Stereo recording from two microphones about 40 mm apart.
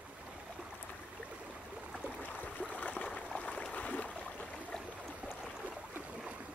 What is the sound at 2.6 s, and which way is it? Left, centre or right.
Stream, left.